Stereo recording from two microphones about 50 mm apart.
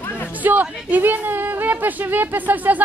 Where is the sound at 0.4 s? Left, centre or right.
Right.